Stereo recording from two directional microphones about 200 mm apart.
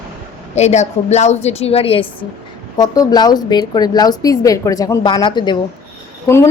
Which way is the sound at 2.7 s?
20° left (ahead or behind).